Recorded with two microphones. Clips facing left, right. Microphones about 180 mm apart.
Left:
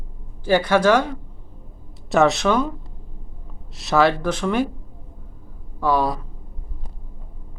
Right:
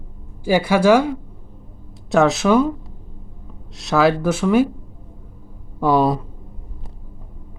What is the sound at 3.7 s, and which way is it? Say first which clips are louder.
Speech: right 2 dB; centre (ahead or behind).